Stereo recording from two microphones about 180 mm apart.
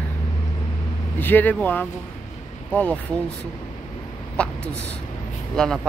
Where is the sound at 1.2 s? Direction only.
10° left (ahead or behind).